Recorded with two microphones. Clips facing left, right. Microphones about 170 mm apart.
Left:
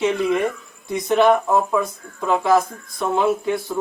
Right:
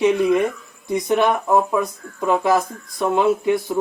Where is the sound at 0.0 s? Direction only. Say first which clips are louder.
Right 3 dB; 15° right (ahead or behind).